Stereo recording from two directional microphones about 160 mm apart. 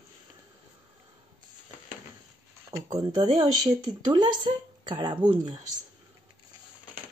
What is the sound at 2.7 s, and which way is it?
Speech, 20° right (ahead or behind).